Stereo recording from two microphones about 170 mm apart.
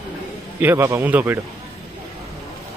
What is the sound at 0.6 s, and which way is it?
Speech, 15° right (ahead or behind).